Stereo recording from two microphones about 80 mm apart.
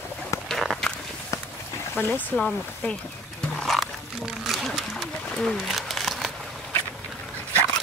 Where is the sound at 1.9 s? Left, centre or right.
Left.